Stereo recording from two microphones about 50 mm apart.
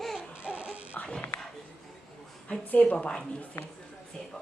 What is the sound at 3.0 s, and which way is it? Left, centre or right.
Speech, centre.